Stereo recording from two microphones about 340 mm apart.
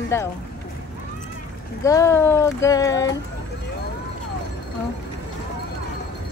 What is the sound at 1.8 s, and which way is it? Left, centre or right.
Speech, centre.